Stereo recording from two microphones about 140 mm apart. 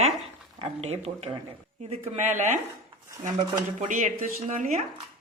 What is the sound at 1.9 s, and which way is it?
Speech, 55° right (ahead or behind).